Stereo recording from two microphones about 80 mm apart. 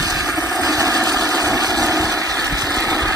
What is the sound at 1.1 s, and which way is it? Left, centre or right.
Vehicle, right.